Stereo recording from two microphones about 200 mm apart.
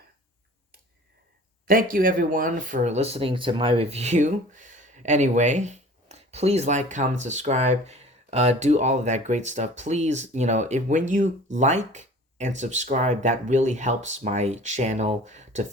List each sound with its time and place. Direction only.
1.6 s speech: 45° right (ahead or behind)